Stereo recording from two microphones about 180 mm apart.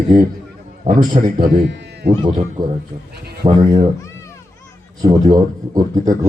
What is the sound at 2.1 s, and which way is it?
Speech, 25° right (ahead or behind).